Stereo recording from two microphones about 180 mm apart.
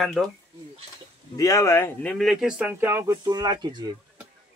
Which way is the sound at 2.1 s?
Centre (ahead or behind).